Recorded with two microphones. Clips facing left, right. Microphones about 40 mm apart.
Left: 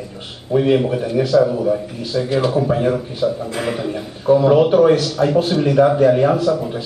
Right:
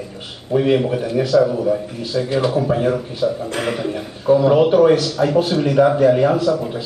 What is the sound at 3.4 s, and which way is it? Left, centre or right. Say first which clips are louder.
Speech: even; right.